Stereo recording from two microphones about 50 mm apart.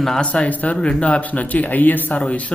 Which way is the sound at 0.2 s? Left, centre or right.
Centre.